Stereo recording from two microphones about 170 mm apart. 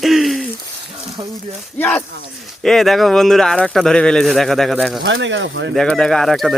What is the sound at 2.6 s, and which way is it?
Speech, centre (ahead or behind).